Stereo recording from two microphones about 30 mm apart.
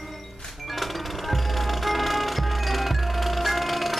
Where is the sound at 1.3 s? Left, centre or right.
Centre.